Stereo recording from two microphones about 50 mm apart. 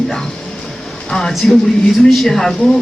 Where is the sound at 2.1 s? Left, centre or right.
Centre.